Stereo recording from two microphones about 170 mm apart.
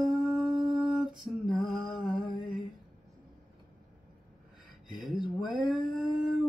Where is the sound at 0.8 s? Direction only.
5° right (ahead or behind).